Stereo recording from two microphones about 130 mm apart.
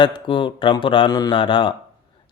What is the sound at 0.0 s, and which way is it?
A man's voice, 40° left (ahead or behind).